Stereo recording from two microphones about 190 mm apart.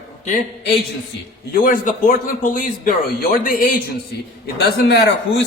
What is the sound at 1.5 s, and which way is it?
Speech, 45° left (ahead or behind).